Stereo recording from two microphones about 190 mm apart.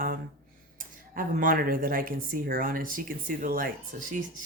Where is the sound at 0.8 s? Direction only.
45° right (ahead or behind).